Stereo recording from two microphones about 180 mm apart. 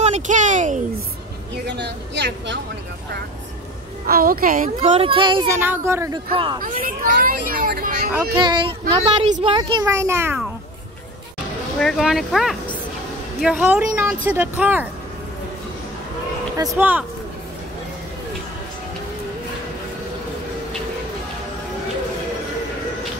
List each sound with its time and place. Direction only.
0.0 s a sound: 40° right (ahead or behind)
1.7 s speech: 70° right (ahead or behind)
4.1 s speech: 55° right (ahead or behind)
4.8 s a child's voice: 35° right (ahead or behind)
5.5 s a woman's voice: 15° right (ahead or behind)
6.3 s a child's voice: 25° right (ahead or behind)
6.6 s speech: 55° right (ahead or behind)
8.4 s a child's voice: 25° right (ahead or behind)
11.8 s a woman's voice: centre (ahead or behind)
16.5 s a woman's voice: 15° right (ahead or behind)